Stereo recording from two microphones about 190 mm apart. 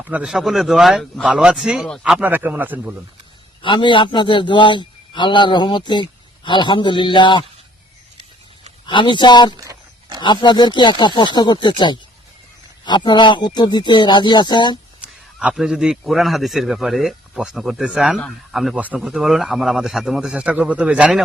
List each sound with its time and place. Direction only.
0.0 s a man's voice: 5° right (ahead or behind)
3.6 s a man's voice: 25° left (ahead or behind)
8.9 s a man's voice: 25° left (ahead or behind)
9.6 s a sound: 20° right (ahead or behind)
10.2 s a man's voice: 25° left (ahead or behind)
15.0 s a man's voice: 5° right (ahead or behind)